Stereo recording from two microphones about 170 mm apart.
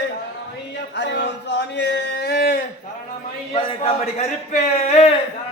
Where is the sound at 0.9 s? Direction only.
85° left; by 2.6 s 70° left (ahead or behind).